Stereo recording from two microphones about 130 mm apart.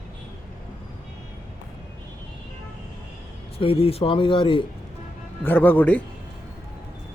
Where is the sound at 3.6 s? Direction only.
45° left (ahead or behind).